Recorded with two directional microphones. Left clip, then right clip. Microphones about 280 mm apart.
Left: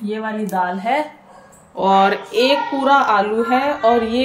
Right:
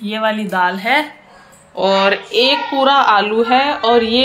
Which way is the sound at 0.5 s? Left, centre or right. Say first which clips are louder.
Right 1 dB; centre.